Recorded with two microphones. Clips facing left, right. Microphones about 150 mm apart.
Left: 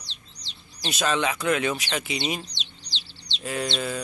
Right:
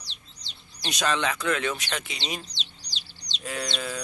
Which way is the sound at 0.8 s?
5° left (ahead or behind).